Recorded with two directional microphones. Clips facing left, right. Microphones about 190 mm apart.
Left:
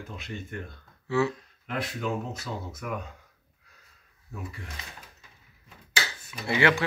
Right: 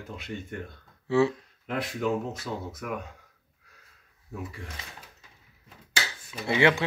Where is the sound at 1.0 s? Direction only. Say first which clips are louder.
Right 3 dB; 30° right (ahead or behind).